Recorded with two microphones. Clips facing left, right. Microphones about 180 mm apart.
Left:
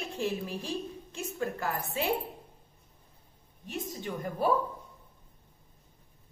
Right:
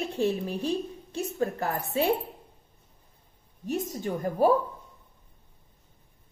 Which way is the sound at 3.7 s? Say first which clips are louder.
Right 7 dB; 40° right (ahead or behind).